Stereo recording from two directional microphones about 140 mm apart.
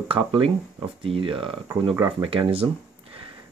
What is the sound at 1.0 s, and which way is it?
Speech, 40° right (ahead or behind).